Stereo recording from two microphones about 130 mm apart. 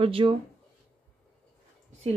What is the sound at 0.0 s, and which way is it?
Speech, 45° right (ahead or behind).